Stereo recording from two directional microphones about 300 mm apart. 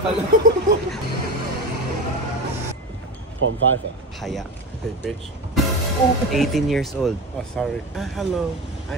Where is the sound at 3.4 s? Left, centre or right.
Right.